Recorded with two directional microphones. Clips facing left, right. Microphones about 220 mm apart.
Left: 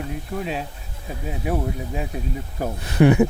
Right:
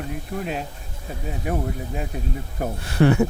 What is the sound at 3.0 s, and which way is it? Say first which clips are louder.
Speech: left 2 dB; 15° left (ahead or behind).